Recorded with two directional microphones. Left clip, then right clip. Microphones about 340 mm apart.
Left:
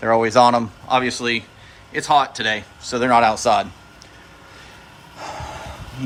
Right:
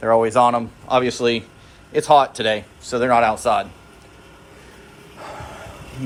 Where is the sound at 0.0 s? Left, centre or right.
Centre.